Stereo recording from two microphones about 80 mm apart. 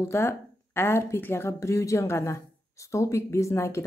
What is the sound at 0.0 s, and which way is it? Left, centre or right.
Speech, left.